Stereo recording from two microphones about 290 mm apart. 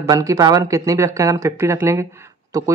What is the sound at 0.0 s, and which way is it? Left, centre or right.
Speech, centre.